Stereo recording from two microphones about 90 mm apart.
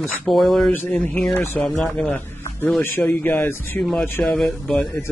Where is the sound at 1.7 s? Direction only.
Centre (ahead or behind).